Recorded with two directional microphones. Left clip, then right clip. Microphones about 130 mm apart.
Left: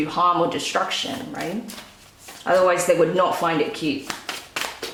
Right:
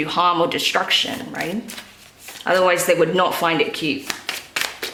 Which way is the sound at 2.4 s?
35° right (ahead or behind).